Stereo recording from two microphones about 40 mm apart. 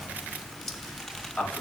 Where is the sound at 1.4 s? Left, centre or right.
Centre.